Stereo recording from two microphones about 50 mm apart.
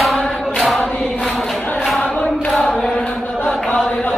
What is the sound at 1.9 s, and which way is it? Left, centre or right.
Choir, left.